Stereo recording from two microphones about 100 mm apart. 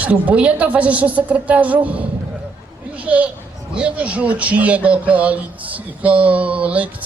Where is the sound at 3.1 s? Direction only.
10° right (ahead or behind).